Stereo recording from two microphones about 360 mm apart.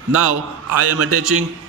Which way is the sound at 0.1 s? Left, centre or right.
Right.